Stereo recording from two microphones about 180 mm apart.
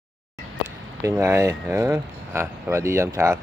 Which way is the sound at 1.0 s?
15° right (ahead or behind).